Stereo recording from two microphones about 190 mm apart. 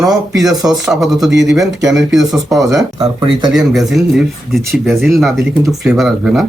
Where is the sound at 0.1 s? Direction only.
Centre (ahead or behind).